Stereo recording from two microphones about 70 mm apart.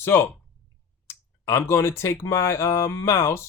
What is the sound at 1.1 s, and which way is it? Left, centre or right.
A man's voice, left.